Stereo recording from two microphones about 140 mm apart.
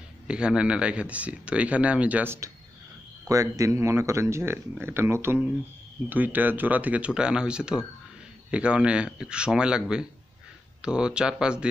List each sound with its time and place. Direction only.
0.3 s speech: 5° right (ahead or behind)